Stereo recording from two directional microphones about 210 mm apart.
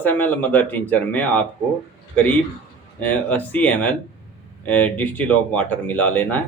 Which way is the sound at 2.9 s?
5° left (ahead or behind).